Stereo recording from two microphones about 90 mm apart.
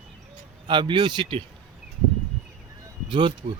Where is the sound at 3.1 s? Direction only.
60° right (ahead or behind).